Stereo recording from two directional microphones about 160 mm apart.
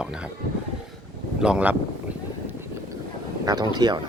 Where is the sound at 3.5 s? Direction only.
25° right (ahead or behind).